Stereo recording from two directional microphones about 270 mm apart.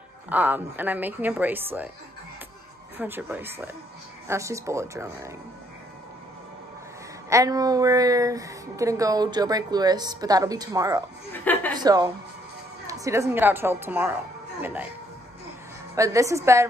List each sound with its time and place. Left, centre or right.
0.3 s speech: centre
3.0 s speech: centre
7.2 s speech: centre
11.3 s chuckle: centre
11.8 s speech: centre
15.9 s speech: centre